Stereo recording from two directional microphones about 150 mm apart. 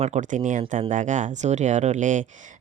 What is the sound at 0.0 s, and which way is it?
Speech, 55° right (ahead or behind).